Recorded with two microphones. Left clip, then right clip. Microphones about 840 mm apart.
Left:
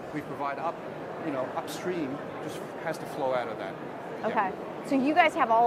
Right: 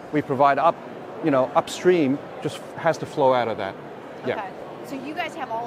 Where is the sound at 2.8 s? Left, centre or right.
Right.